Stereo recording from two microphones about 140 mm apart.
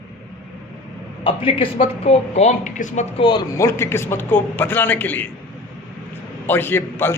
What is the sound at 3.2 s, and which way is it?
Speech, 35° left (ahead or behind).